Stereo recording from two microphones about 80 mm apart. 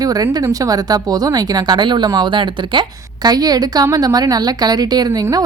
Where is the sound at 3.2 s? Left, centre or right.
Right.